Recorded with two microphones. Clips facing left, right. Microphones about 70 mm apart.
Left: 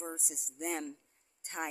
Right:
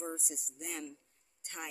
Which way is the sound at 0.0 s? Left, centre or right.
Centre.